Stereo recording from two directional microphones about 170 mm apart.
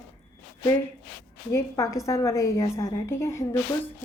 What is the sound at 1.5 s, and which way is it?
A woman's voice, 20° left (ahead or behind).